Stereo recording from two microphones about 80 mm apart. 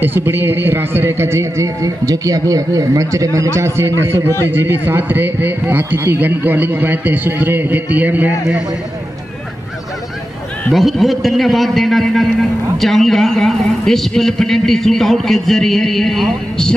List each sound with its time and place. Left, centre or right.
0.0 s a man's voice: right
10.7 s a man's voice: centre